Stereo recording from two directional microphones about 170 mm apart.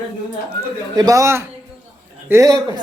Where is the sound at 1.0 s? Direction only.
20° right (ahead or behind).